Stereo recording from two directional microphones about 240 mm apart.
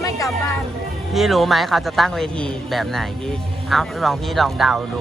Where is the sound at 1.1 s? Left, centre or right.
Centre.